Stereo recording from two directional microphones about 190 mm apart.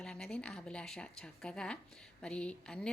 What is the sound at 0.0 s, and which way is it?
A woman's voice, 5° left (ahead or behind).